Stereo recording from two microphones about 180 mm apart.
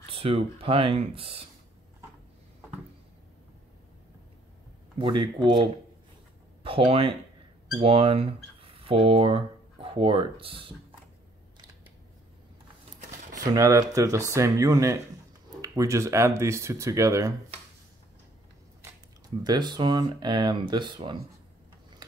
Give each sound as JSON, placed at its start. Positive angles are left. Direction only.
{"t": 0.1, "sound": "speech", "side_deg": -30}
{"t": 4.9, "sound": "speech", "side_deg": -25}
{"t": 13.5, "sound": "speech", "side_deg": -20}
{"t": 19.4, "sound": "speech", "side_deg": -25}